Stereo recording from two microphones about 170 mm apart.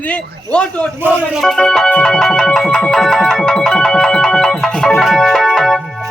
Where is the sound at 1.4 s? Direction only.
5° left (ahead or behind).